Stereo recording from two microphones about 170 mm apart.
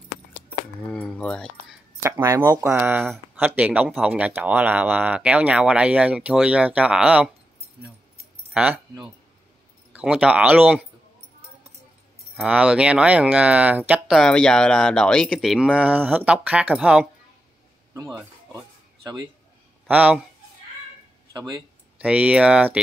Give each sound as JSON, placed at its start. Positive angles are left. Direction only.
{"t": 0.8, "sound": "speech", "side_deg": 5}
{"t": 2.0, "sound": "speech", "side_deg": -15}
{"t": 8.5, "sound": "speech", "side_deg": -5}
{"t": 9.9, "sound": "speech", "side_deg": -5}
{"t": 12.4, "sound": "speech", "side_deg": -5}
{"t": 19.9, "sound": "speech", "side_deg": -10}
{"t": 21.3, "sound": "speech", "side_deg": -20}
{"t": 21.9, "sound": "speech", "side_deg": -5}